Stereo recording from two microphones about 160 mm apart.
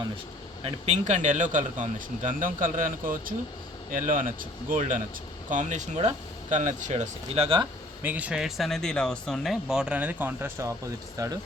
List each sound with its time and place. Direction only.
0.6 s speech: 45° right (ahead or behind)
8.0 s speech: 10° right (ahead or behind)